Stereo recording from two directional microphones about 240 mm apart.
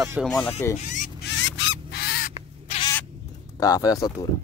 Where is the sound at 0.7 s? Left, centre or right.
Left.